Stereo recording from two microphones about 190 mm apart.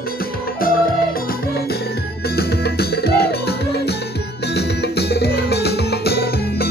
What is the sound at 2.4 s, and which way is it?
Music, 55° left (ahead or behind).